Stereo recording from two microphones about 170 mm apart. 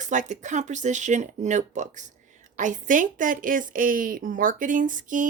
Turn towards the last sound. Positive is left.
turn(degrees=-50)  # may be behind; listen again after turning